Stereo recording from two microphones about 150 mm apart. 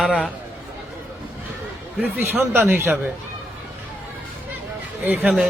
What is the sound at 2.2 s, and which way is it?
Speech, 15° right (ahead or behind).